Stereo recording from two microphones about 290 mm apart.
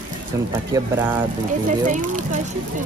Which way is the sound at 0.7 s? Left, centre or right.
Centre.